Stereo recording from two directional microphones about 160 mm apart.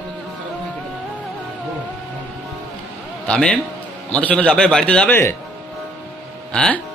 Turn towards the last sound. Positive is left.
turn(degrees=5)  # may be behind; listen again after turning